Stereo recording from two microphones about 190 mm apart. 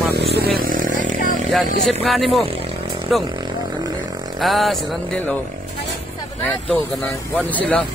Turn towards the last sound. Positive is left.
turn(degrees=5)  # may be behind; listen again after turning